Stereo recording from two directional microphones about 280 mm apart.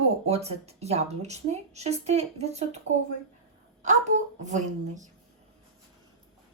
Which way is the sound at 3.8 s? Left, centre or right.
Right.